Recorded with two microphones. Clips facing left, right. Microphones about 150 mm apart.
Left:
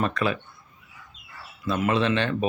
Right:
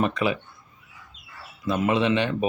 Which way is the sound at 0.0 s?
15° right (ahead or behind).